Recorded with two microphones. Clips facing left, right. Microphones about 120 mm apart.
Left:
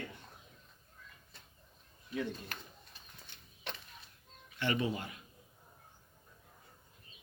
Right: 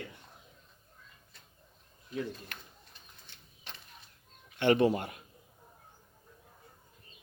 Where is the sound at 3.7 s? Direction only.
60° left (ahead or behind).